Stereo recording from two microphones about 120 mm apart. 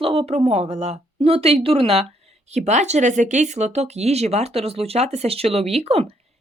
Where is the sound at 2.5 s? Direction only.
70° right (ahead or behind).